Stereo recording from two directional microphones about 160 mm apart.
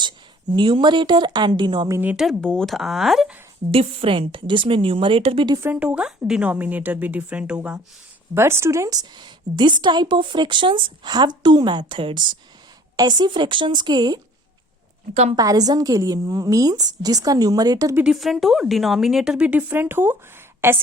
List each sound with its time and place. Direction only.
0.5 s a woman's voice: 30° right (ahead or behind)
2.0 s speech: 5° right (ahead or behind)
3.7 s a woman's voice: 35° right (ahead or behind)
5.6 s a woman's voice: 10° right (ahead or behind); by 14.2 s 25° right (ahead or behind)
15.1 s a woman's voice: 45° right (ahead or behind)
15.4 s a woman's voice: 25° right (ahead or behind)
18.0 s a woman's voice: centre (ahead or behind)